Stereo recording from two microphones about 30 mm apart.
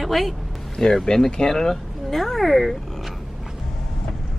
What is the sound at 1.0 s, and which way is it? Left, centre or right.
Speech, left.